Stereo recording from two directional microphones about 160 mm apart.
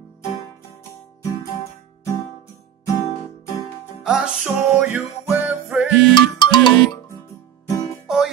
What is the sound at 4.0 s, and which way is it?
Music, 5° right (ahead or behind).